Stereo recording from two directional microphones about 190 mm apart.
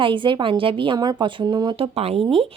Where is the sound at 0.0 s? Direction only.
25° right (ahead or behind).